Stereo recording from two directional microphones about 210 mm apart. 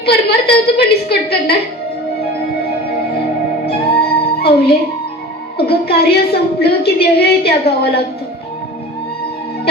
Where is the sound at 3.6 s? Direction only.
50° left (ahead or behind).